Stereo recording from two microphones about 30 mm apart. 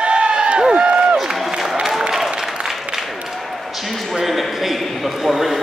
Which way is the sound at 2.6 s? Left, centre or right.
Centre.